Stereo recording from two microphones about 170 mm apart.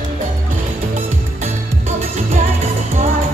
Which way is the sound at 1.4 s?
40° right (ahead or behind).